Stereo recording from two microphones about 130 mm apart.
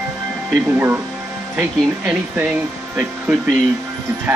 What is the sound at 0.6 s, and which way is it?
Speech, 15° right (ahead or behind).